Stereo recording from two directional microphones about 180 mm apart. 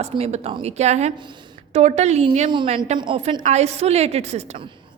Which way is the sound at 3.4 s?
40° right (ahead or behind).